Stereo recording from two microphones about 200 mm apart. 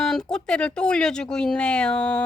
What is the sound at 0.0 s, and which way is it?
Speech, 5° left (ahead or behind).